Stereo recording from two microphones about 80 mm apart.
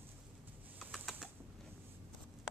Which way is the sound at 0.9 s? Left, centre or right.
Centre.